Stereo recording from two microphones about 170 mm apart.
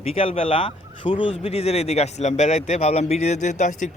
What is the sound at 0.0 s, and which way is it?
Speech, 35° left (ahead or behind).